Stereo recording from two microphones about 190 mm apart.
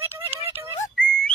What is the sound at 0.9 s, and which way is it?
Whistling, 5° left (ahead or behind).